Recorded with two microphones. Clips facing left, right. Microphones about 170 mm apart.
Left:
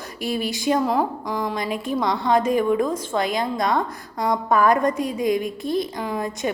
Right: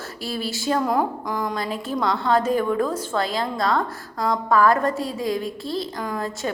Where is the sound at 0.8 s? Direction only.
Centre (ahead or behind).